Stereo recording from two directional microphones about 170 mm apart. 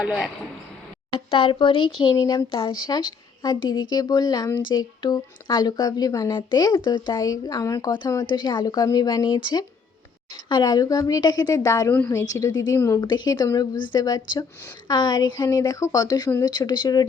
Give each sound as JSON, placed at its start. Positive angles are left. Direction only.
{"t": 0.0, "sound": "speech", "side_deg": 0}
{"t": 1.1, "sound": "a woman's voice", "side_deg": 35}